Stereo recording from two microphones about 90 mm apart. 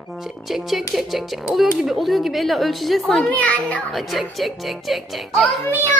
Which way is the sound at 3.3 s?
15° left (ahead or behind).